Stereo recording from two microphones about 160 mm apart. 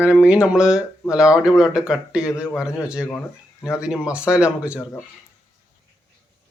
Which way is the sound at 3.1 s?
15° left (ahead or behind).